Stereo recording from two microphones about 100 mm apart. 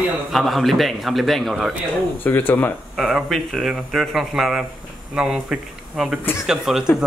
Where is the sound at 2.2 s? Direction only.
20° left (ahead or behind).